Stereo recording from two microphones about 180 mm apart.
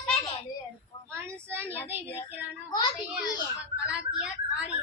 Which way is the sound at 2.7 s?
25° left (ahead or behind).